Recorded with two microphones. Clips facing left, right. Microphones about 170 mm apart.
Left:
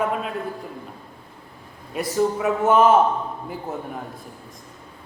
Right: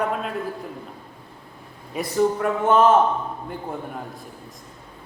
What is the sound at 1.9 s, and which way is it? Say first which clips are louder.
A man's voice: right 1 dB; centre (ahead or behind).